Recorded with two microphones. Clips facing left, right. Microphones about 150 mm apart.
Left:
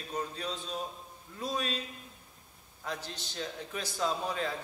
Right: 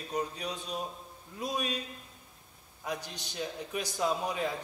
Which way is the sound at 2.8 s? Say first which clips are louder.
Right 2 dB; 15° right (ahead or behind).